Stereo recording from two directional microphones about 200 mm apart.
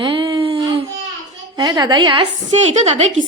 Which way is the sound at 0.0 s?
25° right (ahead or behind).